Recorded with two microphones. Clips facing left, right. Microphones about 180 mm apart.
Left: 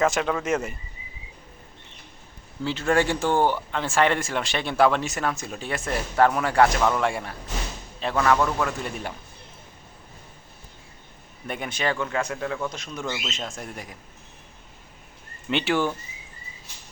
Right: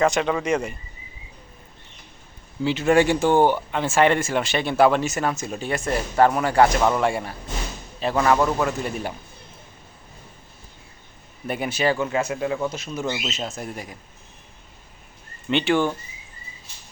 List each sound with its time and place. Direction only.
0.0 s speech: centre (ahead or behind)
2.6 s speech: 15° right (ahead or behind)
8.2 s a man's voice: 15° right (ahead or behind)
8.6 s speech: 5° right (ahead or behind)
11.4 s a man's voice: 5° right (ahead or behind)
12.6 s speech: 5° right (ahead or behind)
15.4 s speech: 5° left (ahead or behind)